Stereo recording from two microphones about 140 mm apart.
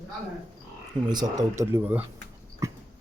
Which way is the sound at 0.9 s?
30° right (ahead or behind).